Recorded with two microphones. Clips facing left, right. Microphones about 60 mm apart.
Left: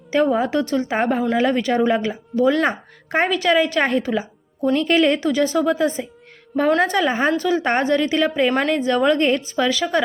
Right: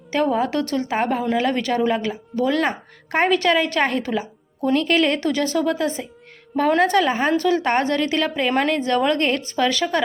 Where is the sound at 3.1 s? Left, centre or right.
Centre.